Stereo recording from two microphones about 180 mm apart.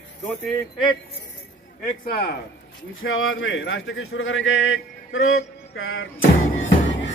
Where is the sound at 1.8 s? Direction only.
55° left (ahead or behind).